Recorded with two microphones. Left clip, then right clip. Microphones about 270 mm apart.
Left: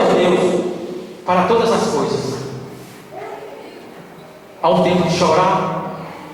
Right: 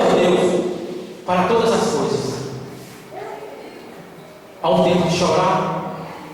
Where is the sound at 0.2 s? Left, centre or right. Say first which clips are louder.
Left 1 dB; left.